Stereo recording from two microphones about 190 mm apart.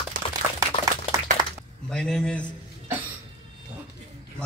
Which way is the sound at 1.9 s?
5° left (ahead or behind).